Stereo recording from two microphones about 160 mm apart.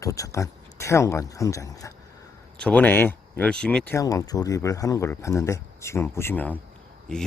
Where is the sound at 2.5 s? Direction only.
5° left (ahead or behind).